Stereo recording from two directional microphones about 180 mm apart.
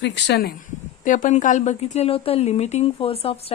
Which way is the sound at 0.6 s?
45° left (ahead or behind).